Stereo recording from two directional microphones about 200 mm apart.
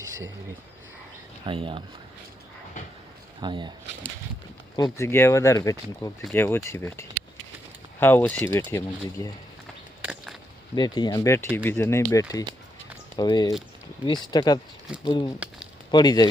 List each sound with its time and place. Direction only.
1.5 s speech: 25° right (ahead or behind)
3.4 s speech: 20° right (ahead or behind)
4.8 s speech: 15° left (ahead or behind)
10.0 s a sound: 5° right (ahead or behind)
10.8 s speech: 20° left (ahead or behind)